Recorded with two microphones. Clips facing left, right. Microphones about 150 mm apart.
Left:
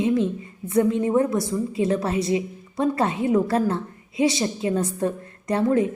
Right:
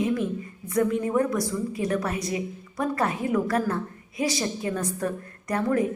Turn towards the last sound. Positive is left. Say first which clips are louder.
# left 4 dB
turn(degrees=25)  # may be behind; listen again after turning